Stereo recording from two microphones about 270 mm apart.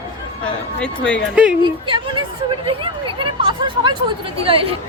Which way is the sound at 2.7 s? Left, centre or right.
Centre.